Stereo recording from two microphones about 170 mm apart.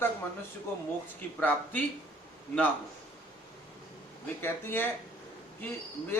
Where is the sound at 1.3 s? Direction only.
10° left (ahead or behind).